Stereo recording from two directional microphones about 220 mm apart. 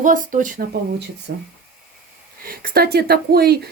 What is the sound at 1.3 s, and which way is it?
Speech, 45° right (ahead or behind).